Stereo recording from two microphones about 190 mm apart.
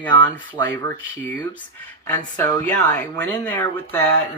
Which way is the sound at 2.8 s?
10° left (ahead or behind).